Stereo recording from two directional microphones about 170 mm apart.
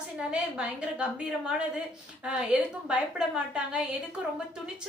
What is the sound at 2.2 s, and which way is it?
A woman's voice, 5° right (ahead or behind).